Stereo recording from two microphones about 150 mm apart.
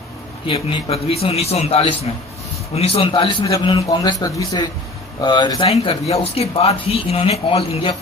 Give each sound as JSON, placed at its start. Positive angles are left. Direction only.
{"t": 0.4, "sound": "a man's voice", "side_deg": 40}
{"t": 3.4, "sound": "a man's voice", "side_deg": 20}
{"t": 5.6, "sound": "speech", "side_deg": 40}